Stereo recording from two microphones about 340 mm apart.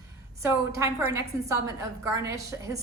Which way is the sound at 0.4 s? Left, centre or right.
Centre.